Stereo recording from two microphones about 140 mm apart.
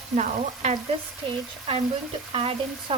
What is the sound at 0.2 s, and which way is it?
Frying, 60° right (ahead or behind).